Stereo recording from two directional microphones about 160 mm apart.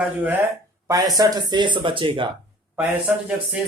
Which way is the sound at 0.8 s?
20° right (ahead or behind).